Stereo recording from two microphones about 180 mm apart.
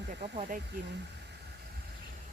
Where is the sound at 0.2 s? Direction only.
45° right (ahead or behind).